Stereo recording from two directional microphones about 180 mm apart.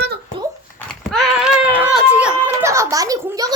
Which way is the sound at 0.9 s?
Centre (ahead or behind).